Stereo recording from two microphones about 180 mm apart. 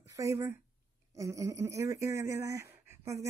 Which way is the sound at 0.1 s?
20° right (ahead or behind).